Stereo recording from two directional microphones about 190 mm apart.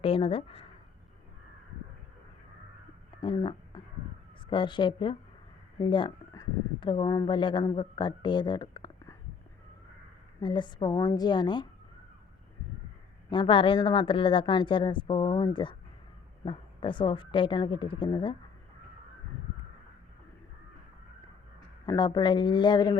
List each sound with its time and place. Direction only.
0.0 s speech: 30° left (ahead or behind)
3.2 s speech: 25° left (ahead or behind)
10.4 s speech: 25° left (ahead or behind)
13.3 s speech: 25° left (ahead or behind)
21.8 s speech: 20° left (ahead or behind)